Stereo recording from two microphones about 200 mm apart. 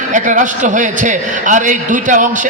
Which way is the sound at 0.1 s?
40° right (ahead or behind).